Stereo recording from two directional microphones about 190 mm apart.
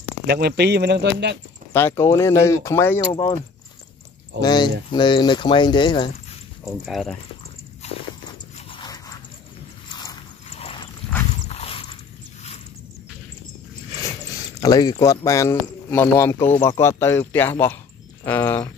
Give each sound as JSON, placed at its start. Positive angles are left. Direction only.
{"t": 0.3, "sound": "speech", "side_deg": -55}
{"t": 1.7, "sound": "speech", "side_deg": 10}
{"t": 4.4, "sound": "speech", "side_deg": 25}
{"t": 6.6, "sound": "speech", "side_deg": 0}
{"t": 7.8, "sound": "biting", "side_deg": 35}
{"t": 8.5, "sound": "dog", "side_deg": 30}
{"t": 10.5, "sound": "a sound", "side_deg": 30}
{"t": 14.3, "sound": "speech", "side_deg": 20}